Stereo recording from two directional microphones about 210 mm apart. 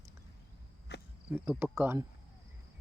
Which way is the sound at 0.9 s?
55° left (ahead or behind).